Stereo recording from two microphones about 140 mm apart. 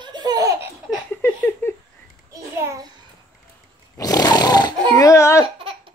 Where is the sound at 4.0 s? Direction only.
25° left (ahead or behind).